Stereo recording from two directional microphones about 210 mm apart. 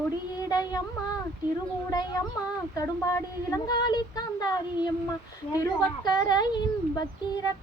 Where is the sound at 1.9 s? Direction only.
15° left (ahead or behind).